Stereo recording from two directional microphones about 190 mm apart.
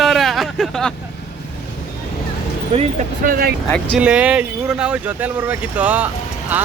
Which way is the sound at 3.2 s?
50° right (ahead or behind).